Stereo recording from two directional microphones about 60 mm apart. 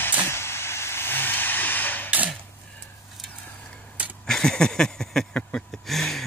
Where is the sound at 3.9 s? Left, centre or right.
Right.